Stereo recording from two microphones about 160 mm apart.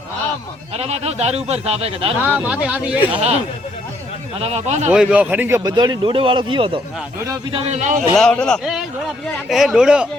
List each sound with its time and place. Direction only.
0.8 s speech: 40° right (ahead or behind)
2.2 s speech: 10° right (ahead or behind)
4.4 s speech: 40° right (ahead or behind)
4.9 s speech: 5° right (ahead or behind); by 6.7 s 35° right (ahead or behind)
7.5 s a man's voice: 45° right (ahead or behind)
8.1 s a man's voice: 5° left (ahead or behind)